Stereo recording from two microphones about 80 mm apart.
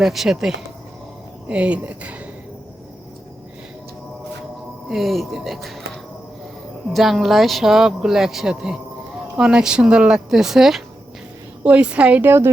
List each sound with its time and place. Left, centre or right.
0.0 s speech: centre
1.5 s a woman's voice: centre
4.9 s speech: centre
6.9 s a woman's voice: centre
11.6 s a woman's voice: centre
12.2 s a woman's voice: right